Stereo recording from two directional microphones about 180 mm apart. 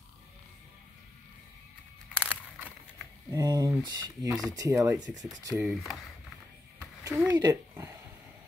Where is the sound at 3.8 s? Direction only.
20° right (ahead or behind).